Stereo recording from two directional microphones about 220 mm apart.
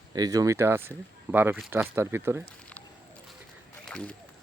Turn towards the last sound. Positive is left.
turn(degrees=5)  # may be behind; listen again after turning